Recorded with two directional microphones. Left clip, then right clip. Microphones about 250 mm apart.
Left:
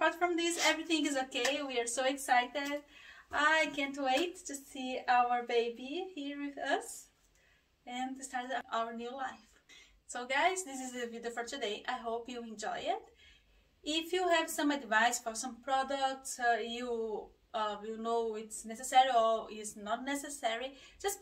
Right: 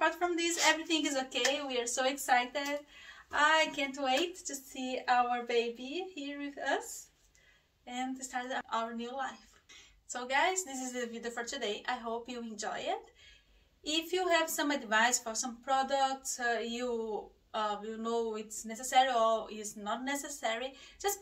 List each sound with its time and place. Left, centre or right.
0.0 s a woman's voice: centre
7.8 s a woman's voice: centre